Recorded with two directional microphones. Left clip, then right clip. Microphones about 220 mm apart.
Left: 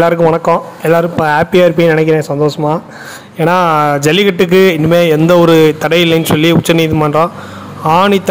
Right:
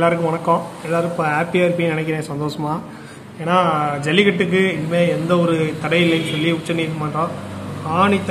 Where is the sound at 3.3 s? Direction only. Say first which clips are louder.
Left 7 dB; 50° left (ahead or behind).